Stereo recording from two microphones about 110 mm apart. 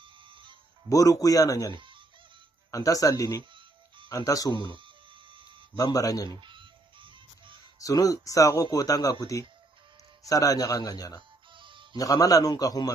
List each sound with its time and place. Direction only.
0.0 s music: 50° right (ahead or behind)
0.8 s speech: 30° left (ahead or behind)
1.7 s fowl: 50° right (ahead or behind)
2.7 s speech: 30° left (ahead or behind)
4.7 s a sound: 50° right (ahead or behind)
5.8 s speech: 35° left (ahead or behind)
6.4 s music: 50° right (ahead or behind)
7.8 s speech: 30° left (ahead or behind)
11.5 s music: 50° right (ahead or behind)
11.9 s speech: 35° left (ahead or behind)